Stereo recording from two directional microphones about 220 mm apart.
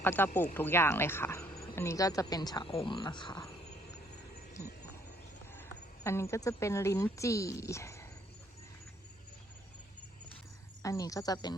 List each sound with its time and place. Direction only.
0.0 s speech: 10° left (ahead or behind)
5.5 s speech: 10° left (ahead or behind)
10.8 s speech: 15° left (ahead or behind)